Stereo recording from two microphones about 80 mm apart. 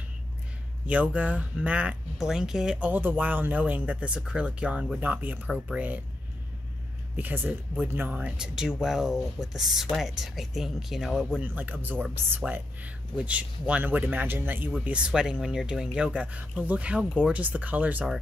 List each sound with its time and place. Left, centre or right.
0.8 s speech: centre
2.9 s speech: right
5.5 s speech: centre
7.2 s speech: right; by 11.3 s centre
11.4 s speech: right
14.9 s speech: centre